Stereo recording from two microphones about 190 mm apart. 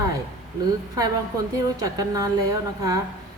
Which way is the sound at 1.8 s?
20° right (ahead or behind).